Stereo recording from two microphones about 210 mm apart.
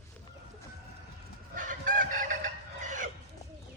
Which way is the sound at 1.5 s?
40° right (ahead or behind).